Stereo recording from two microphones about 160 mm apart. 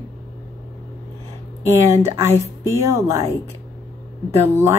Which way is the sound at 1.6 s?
15° right (ahead or behind).